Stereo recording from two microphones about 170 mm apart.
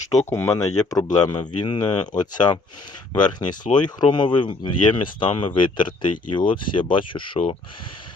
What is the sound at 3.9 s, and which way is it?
Speech, 25° left (ahead or behind).